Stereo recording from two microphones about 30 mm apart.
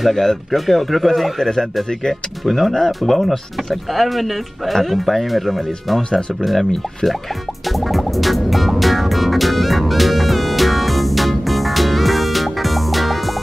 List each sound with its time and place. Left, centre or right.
0.0 s speech: centre
1.4 s speech: centre
2.4 s speech: centre
7.9 s music: centre